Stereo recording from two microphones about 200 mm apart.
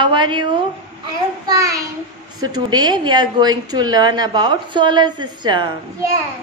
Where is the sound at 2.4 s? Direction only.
20° right (ahead or behind).